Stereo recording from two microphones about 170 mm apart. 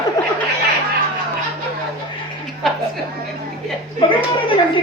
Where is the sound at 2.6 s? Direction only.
Centre (ahead or behind).